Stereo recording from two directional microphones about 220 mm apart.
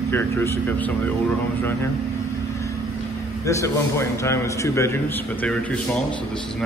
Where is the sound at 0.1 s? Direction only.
10° left (ahead or behind).